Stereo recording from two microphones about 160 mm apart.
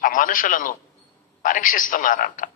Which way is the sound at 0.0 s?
60° left (ahead or behind).